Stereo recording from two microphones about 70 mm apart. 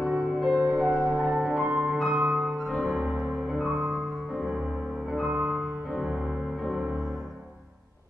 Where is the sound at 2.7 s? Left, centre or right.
Centre.